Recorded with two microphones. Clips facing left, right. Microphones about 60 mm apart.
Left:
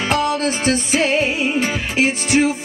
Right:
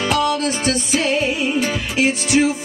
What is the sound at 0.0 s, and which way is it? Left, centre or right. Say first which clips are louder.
Music: even; left.